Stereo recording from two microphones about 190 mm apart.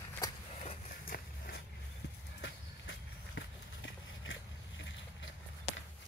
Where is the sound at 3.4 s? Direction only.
85° left.